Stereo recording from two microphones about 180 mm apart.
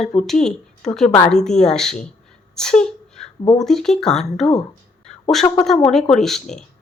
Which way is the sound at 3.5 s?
Centre (ahead or behind).